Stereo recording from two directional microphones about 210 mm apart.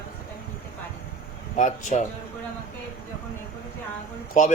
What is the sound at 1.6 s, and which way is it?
Speech, 35° left (ahead or behind).